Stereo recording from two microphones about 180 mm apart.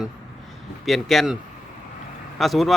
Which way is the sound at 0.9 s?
Centre (ahead or behind).